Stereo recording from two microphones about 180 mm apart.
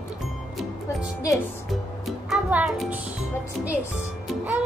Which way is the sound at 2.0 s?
5° right (ahead or behind).